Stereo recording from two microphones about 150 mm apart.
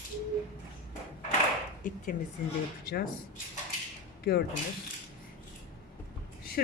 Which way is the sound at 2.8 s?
90° left.